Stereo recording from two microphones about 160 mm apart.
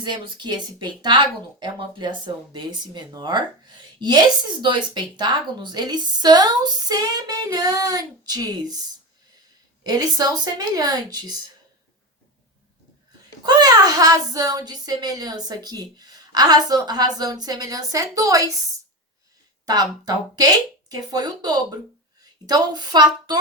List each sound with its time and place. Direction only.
0.0 s speech: 30° right (ahead or behind)
9.8 s speech: 25° right (ahead or behind)
13.4 s a woman's voice: 25° right (ahead or behind)